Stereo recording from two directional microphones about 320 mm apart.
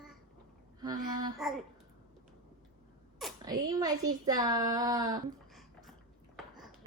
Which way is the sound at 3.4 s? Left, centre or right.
Centre.